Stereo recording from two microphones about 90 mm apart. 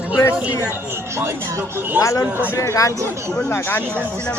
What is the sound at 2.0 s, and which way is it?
Speech, 35° left (ahead or behind).